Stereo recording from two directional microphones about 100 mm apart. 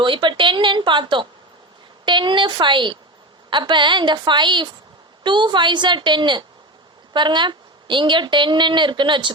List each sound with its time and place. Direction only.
0.0 s a woman's voice: 55° right (ahead or behind)